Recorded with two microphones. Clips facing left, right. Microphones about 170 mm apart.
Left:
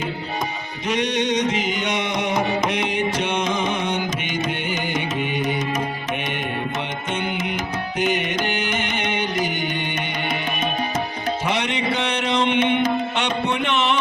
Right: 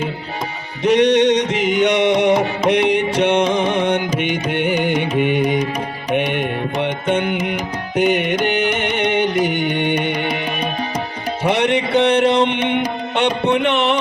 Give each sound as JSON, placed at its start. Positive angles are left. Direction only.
{"t": 0.9, "sound": "music", "side_deg": -65}
{"t": 5.4, "sound": "music", "side_deg": -15}
{"t": 7.1, "sound": "music", "side_deg": -60}
{"t": 11.4, "sound": "a sound", "side_deg": -60}
{"t": 12.5, "sound": "music", "side_deg": -15}
{"t": 13.7, "sound": "a sound", "side_deg": -60}